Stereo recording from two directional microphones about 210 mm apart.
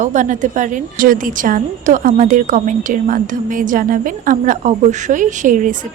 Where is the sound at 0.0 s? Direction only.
35° right (ahead or behind).